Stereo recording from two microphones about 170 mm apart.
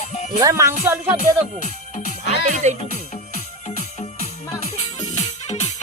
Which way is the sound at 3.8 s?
40° left (ahead or behind).